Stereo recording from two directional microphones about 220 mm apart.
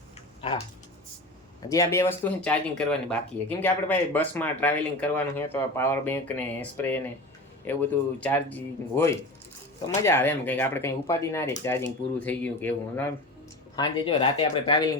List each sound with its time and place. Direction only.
1.7 s speech: 15° left (ahead or behind)
13.7 s speech: 20° left (ahead or behind)